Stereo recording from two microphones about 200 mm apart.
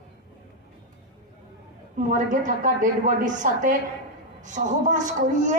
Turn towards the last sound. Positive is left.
turn(degrees=-40)  # may be behind; listen again after turning